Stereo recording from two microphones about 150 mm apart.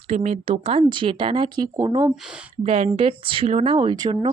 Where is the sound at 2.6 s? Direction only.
40° right (ahead or behind).